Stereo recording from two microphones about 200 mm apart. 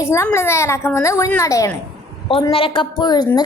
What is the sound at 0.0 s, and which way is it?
A woman's voice, 15° left (ahead or behind).